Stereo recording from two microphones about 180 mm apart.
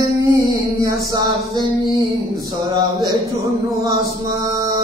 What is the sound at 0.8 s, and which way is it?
Music, 20° right (ahead or behind).